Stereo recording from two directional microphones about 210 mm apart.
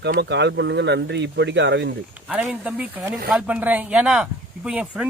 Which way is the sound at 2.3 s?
5° right (ahead or behind).